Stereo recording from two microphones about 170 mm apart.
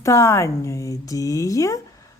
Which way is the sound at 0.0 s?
15° left (ahead or behind).